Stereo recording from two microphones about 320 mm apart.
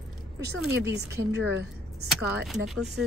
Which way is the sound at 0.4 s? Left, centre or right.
Right.